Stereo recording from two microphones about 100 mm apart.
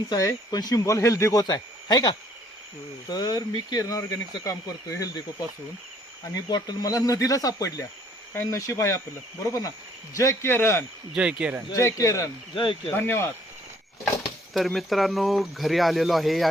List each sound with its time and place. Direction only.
0.1 s speech: 40° left (ahead or behind)
6.5 s speech: 40° left (ahead or behind)
11.1 s speech: 10° right (ahead or behind)
11.7 s speech: 30° left (ahead or behind)
13.0 s speech: 20° left (ahead or behind)
14.5 s speech: centre (ahead or behind)